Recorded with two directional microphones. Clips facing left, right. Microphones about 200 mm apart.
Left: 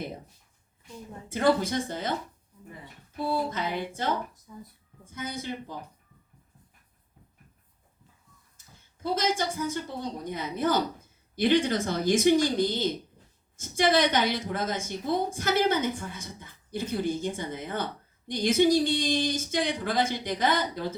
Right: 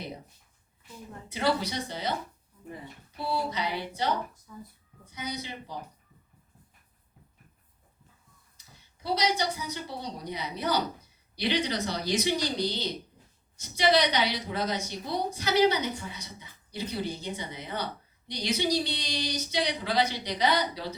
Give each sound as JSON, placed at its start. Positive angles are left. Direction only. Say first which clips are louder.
{"t": 1.3, "sound": "a woman's voice", "louder": "left 4 dB", "side_deg": 50}
{"t": 3.2, "sound": "a woman's voice", "louder": "left 2 dB", "side_deg": 50}
{"t": 8.5, "sound": "a woman's voice", "louder": "left 1 dB", "side_deg": 50}